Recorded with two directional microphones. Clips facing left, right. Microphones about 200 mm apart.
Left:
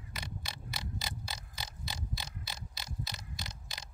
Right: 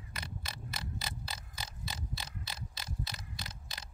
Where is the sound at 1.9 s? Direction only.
10° left (ahead or behind).